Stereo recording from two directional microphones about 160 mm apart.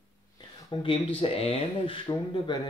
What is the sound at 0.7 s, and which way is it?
Speech, 35° left (ahead or behind).